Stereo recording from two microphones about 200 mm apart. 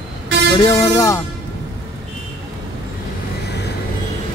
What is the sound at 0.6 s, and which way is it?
Speech, 15° left (ahead or behind).